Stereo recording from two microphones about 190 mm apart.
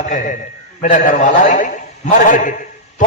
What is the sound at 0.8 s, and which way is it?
A man's voice, 45° left (ahead or behind).